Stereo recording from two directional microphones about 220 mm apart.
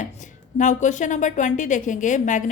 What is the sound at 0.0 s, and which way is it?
A woman's voice, 35° left (ahead or behind).